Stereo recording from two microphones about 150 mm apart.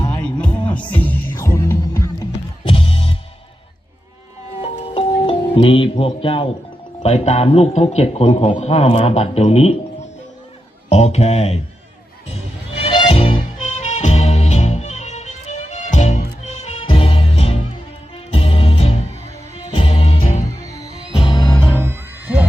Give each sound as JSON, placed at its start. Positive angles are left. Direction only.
{"t": 0.2, "sound": "music", "side_deg": 10}
{"t": 2.6, "sound": "music", "side_deg": 40}
{"t": 4.6, "sound": "music", "side_deg": 40}
{"t": 7.0, "sound": "speech", "side_deg": 45}
{"t": 10.8, "sound": "speech", "side_deg": 45}
{"t": 12.8, "sound": "music", "side_deg": 35}
{"t": 13.7, "sound": "music", "side_deg": 50}
{"t": 16.8, "sound": "music", "side_deg": 35}
{"t": 20.6, "sound": "music", "side_deg": 20}
{"t": 20.9, "sound": "music", "side_deg": 40}
{"t": 21.7, "sound": "music", "side_deg": -15}